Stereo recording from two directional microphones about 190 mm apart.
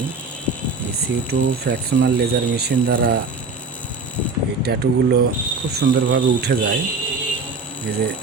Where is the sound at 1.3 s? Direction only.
60° right (ahead or behind).